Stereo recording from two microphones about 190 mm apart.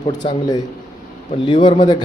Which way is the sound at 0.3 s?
20° left (ahead or behind).